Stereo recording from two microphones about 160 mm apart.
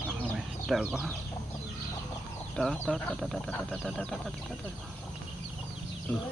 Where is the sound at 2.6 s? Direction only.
Centre (ahead or behind).